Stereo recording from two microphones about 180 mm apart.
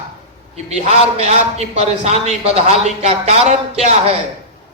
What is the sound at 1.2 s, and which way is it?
Speech, 35° right (ahead or behind).